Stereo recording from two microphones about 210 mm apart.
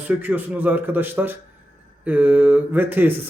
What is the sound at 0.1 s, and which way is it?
A man's voice, 10° right (ahead or behind).